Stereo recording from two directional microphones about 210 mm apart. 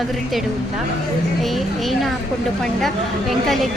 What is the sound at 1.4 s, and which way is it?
A woman's voice, centre (ahead or behind).